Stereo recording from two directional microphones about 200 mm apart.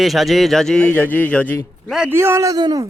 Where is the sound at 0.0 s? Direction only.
Centre (ahead or behind).